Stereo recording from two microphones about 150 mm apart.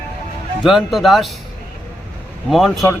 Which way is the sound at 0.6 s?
Centre (ahead or behind).